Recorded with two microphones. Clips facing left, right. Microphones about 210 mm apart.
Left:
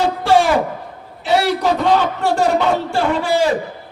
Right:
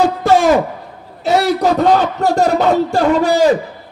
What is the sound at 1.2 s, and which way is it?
A man's voice, 40° right (ahead or behind).